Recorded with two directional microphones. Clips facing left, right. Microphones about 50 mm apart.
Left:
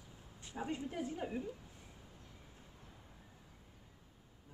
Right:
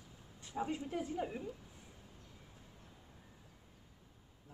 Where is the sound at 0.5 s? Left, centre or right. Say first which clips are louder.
Right 2 dB; centre.